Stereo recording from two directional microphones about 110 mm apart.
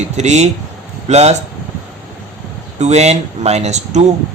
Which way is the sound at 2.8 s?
90° right.